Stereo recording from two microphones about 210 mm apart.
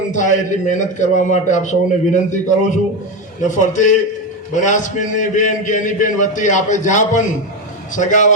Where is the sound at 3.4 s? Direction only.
35° left (ahead or behind).